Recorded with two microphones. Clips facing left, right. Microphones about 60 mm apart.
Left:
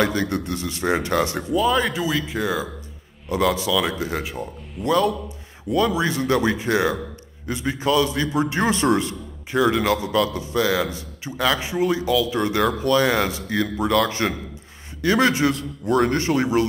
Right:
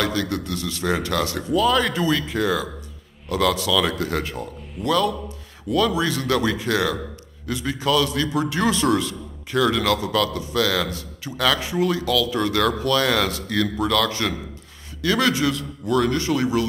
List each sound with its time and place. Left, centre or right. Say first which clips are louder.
0.0 s a man's voice: left 2 dB; left; by 4.8 s centre
4.8 s a man's voice: left 1 dB; left